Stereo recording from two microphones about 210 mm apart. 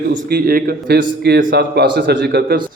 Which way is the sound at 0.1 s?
45° right (ahead or behind).